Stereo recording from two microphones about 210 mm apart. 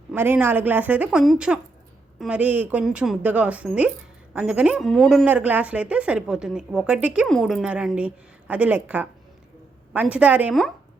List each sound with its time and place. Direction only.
0.1 s speech: 10° right (ahead or behind)